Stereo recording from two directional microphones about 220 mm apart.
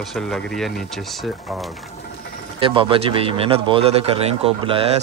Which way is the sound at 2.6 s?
25° right (ahead or behind).